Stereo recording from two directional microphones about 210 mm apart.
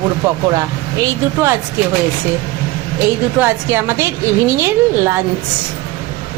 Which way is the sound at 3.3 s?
10° right (ahead or behind).